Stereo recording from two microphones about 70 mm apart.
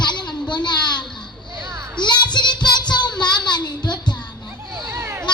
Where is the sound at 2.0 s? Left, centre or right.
Left.